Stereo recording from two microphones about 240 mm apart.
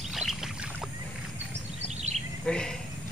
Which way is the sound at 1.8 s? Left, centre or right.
Right.